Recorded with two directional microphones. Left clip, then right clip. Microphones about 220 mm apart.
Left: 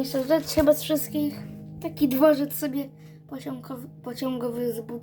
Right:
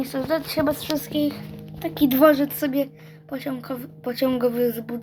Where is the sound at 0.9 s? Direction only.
10° right (ahead or behind).